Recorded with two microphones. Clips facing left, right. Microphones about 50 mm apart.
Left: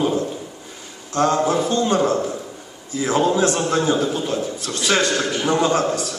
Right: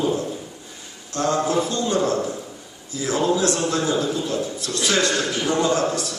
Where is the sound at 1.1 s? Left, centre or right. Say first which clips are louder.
Left 3 dB; left.